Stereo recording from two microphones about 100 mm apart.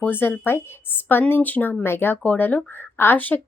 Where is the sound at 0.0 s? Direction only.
20° left (ahead or behind).